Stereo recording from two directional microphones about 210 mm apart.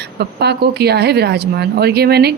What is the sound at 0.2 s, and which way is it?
A woman's voice, 50° right (ahead or behind).